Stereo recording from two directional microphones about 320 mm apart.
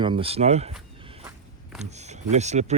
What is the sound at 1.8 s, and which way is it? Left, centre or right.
Speech, right.